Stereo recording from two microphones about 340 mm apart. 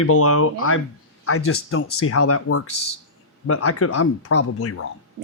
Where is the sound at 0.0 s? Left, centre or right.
Left.